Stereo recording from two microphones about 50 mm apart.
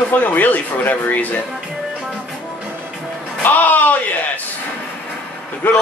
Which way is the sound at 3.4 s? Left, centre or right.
Left.